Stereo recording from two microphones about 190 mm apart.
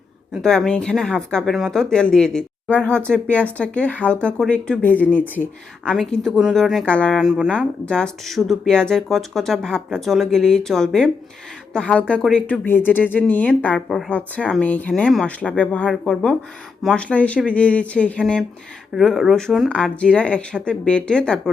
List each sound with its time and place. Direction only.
0.4 s speech: 5° left (ahead or behind)